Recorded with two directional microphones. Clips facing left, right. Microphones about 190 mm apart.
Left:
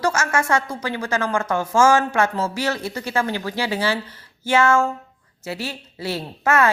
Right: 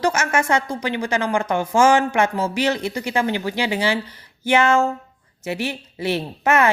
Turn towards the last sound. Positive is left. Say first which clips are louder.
# right 1 dB
turn(degrees=-20)  # may be behind; listen again after turning